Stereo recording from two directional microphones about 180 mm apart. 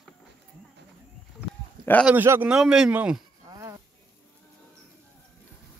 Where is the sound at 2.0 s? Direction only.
10° right (ahead or behind).